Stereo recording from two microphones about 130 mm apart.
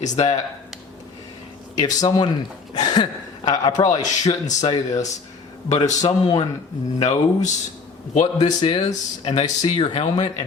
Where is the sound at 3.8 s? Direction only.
65° left (ahead or behind).